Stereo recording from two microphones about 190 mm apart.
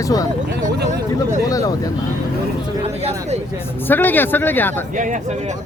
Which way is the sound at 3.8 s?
10° left (ahead or behind).